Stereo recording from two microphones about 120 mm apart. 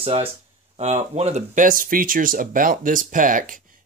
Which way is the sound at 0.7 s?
60° right (ahead or behind).